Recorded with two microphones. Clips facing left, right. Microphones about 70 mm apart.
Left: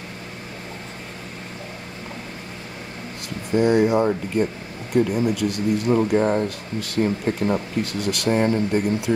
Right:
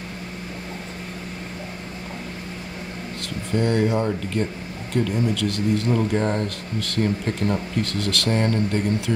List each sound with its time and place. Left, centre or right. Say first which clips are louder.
3.5 s speech: left 4 dB; centre